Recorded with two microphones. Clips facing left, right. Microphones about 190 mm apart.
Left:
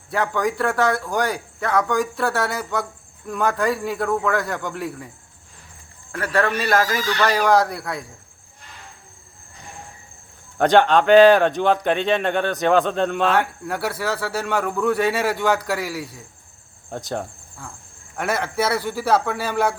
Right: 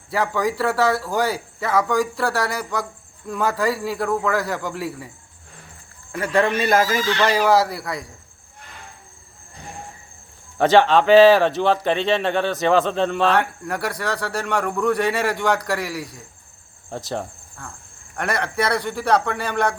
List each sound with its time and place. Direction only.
0.1 s a man's voice: centre (ahead or behind)
10.6 s speech: centre (ahead or behind)